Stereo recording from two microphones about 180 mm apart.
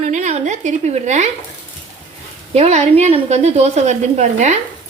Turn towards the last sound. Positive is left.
turn(degrees=-40)  # may be behind; listen again after turning